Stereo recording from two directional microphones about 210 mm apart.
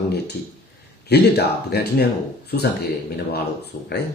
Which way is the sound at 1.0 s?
50° left (ahead or behind).